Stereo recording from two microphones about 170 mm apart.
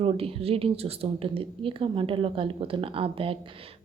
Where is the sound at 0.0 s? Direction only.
35° right (ahead or behind).